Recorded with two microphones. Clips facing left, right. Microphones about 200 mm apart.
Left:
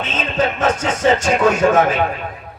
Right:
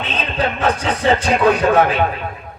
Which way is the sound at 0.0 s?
45° left (ahead or behind).